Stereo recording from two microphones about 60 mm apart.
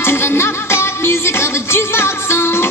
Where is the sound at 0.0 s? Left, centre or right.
Left.